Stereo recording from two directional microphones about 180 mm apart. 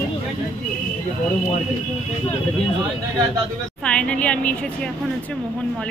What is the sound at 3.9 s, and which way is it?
A woman's voice, 5° left (ahead or behind).